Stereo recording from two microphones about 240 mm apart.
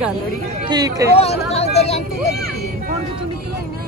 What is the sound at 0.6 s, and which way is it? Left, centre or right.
Speech, centre.